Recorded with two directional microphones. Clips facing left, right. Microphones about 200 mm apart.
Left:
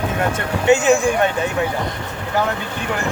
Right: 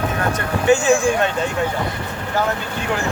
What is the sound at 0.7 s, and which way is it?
Speech, 20° left (ahead or behind).